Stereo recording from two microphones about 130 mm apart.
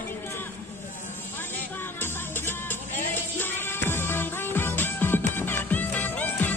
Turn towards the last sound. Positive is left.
turn(degrees=15)  # may be behind; listen again after turning